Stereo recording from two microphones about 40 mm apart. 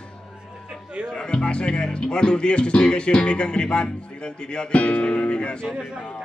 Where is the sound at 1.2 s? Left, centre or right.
Left.